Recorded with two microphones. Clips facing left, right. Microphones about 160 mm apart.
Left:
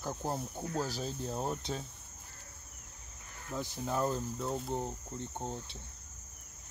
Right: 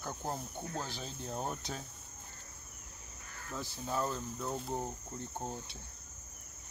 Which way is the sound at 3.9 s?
40° left (ahead or behind).